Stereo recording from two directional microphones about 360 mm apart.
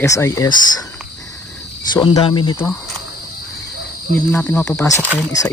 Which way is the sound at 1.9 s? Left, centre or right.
Centre.